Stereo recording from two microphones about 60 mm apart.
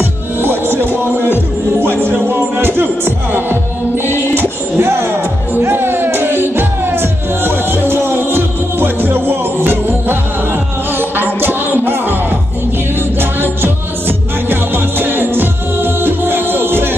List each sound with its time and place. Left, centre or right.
0.0 s music: right